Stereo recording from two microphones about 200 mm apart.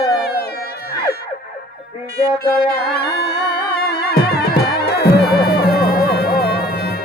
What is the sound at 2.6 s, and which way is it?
Music, 50° left (ahead or behind).